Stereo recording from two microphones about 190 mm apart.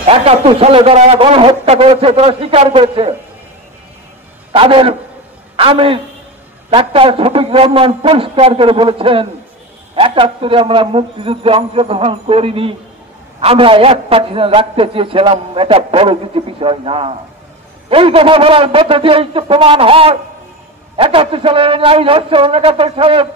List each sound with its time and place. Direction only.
0.0 s a man's voice: 30° right (ahead or behind)
4.5 s a man's voice: 30° right (ahead or behind)